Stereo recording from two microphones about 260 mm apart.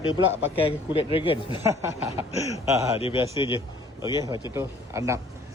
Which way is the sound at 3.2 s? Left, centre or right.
Centre.